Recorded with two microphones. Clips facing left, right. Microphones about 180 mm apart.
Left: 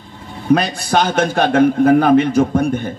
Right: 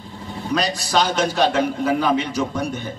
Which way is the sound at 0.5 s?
55° left (ahead or behind).